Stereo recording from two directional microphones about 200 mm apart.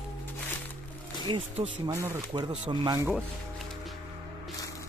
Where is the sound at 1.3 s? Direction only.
25° right (ahead or behind).